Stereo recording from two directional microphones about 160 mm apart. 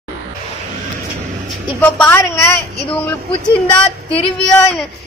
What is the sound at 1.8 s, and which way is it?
Speech, 10° left (ahead or behind).